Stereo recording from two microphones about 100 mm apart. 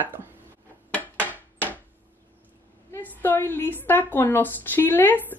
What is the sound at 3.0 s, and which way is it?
A woman's voice, 20° left (ahead or behind).